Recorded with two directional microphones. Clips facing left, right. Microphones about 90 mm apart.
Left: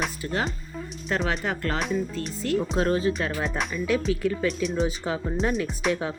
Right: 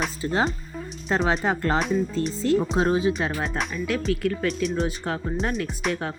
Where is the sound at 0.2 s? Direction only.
30° right (ahead or behind).